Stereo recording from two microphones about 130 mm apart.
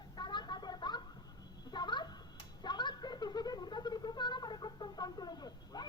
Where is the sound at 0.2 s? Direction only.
35° left (ahead or behind).